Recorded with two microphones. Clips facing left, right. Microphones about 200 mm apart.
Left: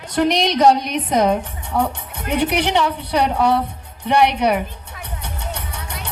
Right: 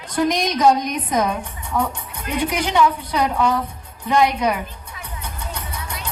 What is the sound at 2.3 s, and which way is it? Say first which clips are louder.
Music: left 2 dB; 70° left (ahead or behind).